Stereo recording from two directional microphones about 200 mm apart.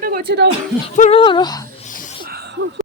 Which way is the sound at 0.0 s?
45° right (ahead or behind).